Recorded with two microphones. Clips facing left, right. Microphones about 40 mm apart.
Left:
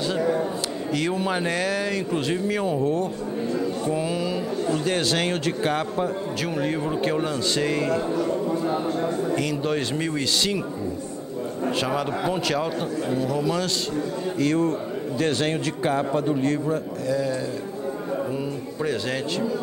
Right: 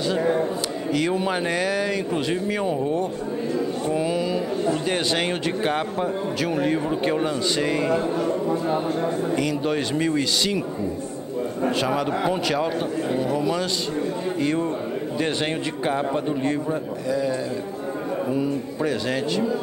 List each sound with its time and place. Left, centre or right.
0.9 s a man's voice: centre
2.8 s speech: centre
3.9 s a man's voice: centre
9.4 s speech: centre
11.7 s a man's voice: centre
14.4 s a man's voice: right; by 19.4 s centre